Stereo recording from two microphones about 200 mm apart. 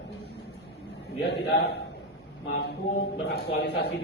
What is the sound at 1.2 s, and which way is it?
A man's voice, 55° left (ahead or behind).